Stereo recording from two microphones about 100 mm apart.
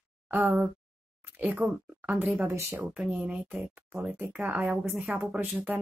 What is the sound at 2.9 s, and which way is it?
Speech, 10° right (ahead or behind).